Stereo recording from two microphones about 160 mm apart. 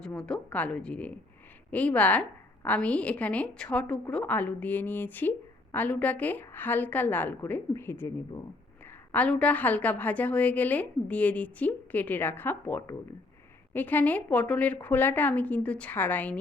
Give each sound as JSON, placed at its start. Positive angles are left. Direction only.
{"t": 0.0, "sound": "a woman's voice", "side_deg": 5}